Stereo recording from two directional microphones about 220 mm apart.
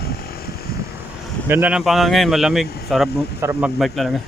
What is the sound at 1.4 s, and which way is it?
Speech, 10° right (ahead or behind).